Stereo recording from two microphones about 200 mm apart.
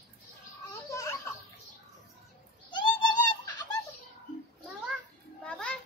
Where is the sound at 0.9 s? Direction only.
15° left (ahead or behind).